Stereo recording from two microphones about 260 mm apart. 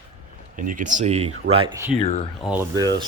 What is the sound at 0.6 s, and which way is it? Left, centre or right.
Speech, right.